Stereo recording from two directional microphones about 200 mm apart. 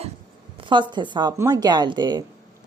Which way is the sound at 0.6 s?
25° right (ahead or behind).